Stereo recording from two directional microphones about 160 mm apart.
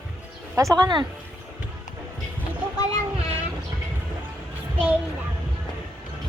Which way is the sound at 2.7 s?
25° left (ahead or behind).